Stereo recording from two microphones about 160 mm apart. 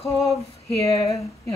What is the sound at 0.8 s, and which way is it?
Speech, 20° left (ahead or behind).